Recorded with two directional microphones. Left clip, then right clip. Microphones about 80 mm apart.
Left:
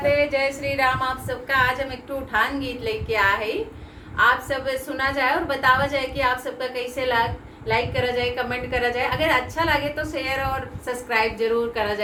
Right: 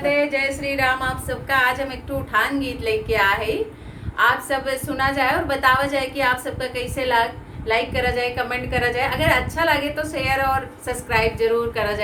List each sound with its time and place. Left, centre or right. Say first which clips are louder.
0.0 s a woman's voice: even; right